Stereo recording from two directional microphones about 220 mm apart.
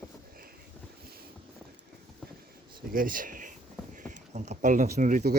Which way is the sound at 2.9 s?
40° right (ahead or behind).